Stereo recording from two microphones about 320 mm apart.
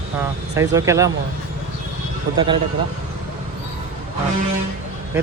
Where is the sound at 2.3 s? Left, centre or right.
Centre.